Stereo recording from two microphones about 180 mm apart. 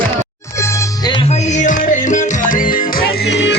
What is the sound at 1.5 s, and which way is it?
Music, 45° left (ahead or behind).